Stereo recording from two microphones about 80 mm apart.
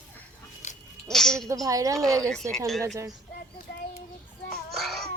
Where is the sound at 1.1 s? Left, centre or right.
Centre.